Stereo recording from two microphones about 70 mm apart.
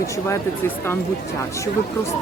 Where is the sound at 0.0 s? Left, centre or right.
Left.